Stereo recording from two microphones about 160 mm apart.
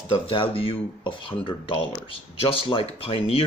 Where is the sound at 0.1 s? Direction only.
35° left (ahead or behind).